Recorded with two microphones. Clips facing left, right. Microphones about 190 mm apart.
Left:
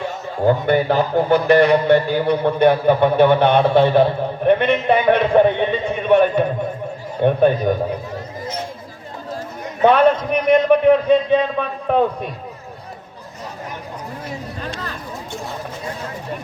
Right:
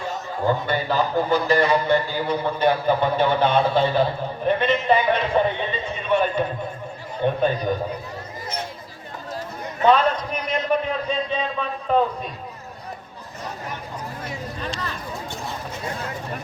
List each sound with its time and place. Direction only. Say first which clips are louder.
0.4 s a man's voice: left 7 dB; 60° left (ahead or behind)
9.8 s a man's voice: left 5 dB; 60° left (ahead or behind)
14.6 s a sound: left 1 dB; 45° left (ahead or behind)